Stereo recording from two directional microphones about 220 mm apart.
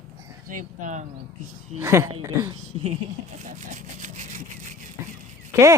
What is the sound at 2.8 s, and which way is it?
Speech, 35° right (ahead or behind).